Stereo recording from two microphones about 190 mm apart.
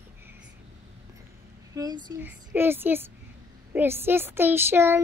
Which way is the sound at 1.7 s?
20° right (ahead or behind).